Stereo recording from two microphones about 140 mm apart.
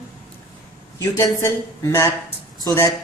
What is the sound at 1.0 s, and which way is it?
A woman's voice, 20° left (ahead or behind).